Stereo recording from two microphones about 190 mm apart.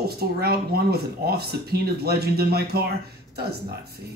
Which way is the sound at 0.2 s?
55° right (ahead or behind).